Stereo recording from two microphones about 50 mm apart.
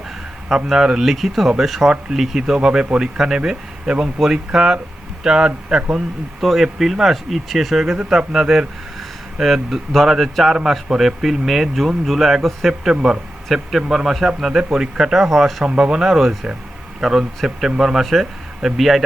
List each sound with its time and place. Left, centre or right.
0.5 s a man's voice: centre
2.6 s a man's voice: centre
6.4 s a man's voice: centre
12.9 s a man's voice: centre
13.5 s a man's voice: centre
15.6 s a man's voice: centre